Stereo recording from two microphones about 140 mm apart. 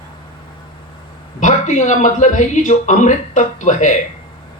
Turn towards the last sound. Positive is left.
turn(degrees=60)  # may be behind; listen again after turning